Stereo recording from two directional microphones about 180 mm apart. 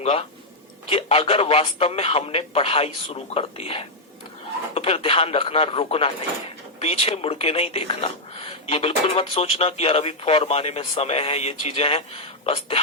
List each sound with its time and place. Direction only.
0.0 s speech: 35° left (ahead or behind)